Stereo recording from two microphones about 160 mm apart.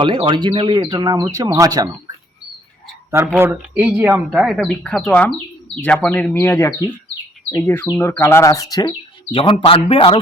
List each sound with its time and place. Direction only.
0.0 s speech: 30° right (ahead or behind)
3.3 s speech: 15° right (ahead or behind); by 10.2 s 35° left (ahead or behind)